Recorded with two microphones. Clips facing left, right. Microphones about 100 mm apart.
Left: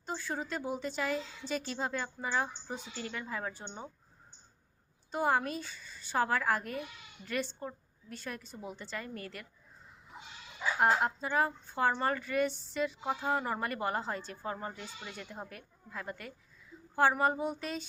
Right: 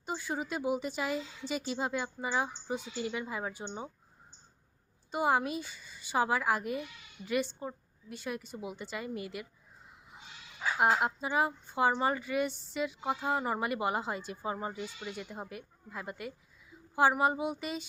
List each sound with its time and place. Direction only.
0.0 s speech: 10° right (ahead or behind)
5.1 s speech: 5° right (ahead or behind)
10.8 s speech: 5° right (ahead or behind)